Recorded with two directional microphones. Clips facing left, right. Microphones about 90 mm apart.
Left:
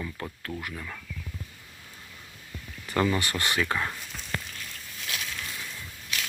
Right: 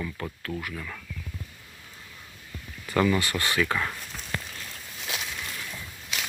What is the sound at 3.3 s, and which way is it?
Speech, 20° left (ahead or behind).